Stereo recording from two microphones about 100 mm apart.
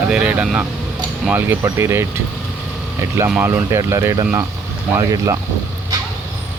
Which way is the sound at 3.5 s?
30° right (ahead or behind).